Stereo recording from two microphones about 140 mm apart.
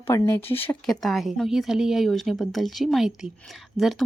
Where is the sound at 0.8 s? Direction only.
Centre (ahead or behind).